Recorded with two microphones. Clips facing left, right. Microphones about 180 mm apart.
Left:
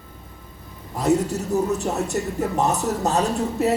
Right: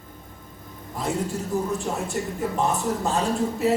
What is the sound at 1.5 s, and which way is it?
Speech, 40° left (ahead or behind).